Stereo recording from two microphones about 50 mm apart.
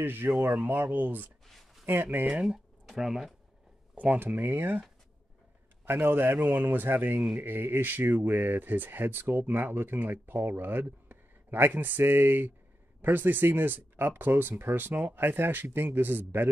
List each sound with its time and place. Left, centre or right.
0.0 s speech: right
1.5 s a sound: centre
1.9 s speech: right
3.0 s speech: centre
3.9 s speech: right
5.9 s speech: right